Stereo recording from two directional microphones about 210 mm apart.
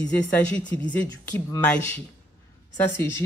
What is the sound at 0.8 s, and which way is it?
Speech, 5° left (ahead or behind).